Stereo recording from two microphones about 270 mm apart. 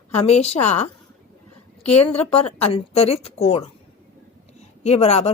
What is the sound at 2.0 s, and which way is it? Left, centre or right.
Speech, left.